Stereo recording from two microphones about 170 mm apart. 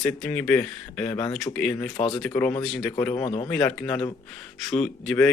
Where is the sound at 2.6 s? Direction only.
Centre (ahead or behind).